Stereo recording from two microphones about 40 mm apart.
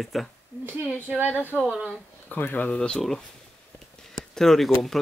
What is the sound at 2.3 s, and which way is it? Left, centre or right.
Speech, left.